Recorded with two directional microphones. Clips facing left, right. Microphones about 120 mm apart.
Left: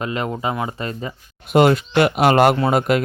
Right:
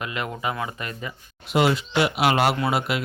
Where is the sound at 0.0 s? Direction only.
30° left (ahead or behind).